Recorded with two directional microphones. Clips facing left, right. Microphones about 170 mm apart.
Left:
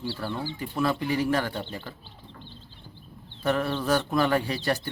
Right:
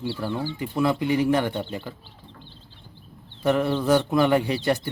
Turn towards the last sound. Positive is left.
turn(degrees=-20)  # may be behind; listen again after turning